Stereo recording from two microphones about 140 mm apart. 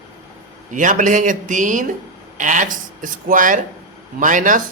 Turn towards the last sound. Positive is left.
turn(degrees=-65)  # may be behind; listen again after turning